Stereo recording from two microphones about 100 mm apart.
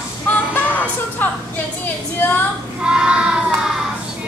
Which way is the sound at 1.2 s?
20° left (ahead or behind).